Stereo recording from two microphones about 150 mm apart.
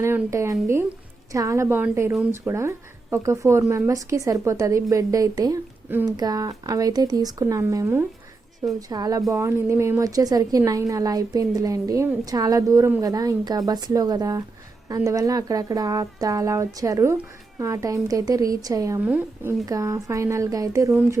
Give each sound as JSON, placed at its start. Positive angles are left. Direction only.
{"t": 0.0, "sound": "a woman's voice", "side_deg": -20}